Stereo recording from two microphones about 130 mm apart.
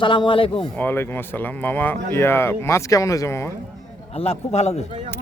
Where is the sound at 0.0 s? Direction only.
40° left (ahead or behind).